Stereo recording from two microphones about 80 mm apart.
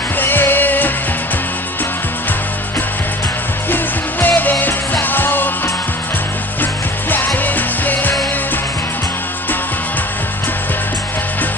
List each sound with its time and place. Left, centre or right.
0.2 s music: left
4.3 s music: left
6.6 s music: left